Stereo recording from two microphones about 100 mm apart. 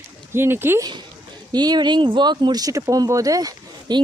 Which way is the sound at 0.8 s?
50° right (ahead or behind).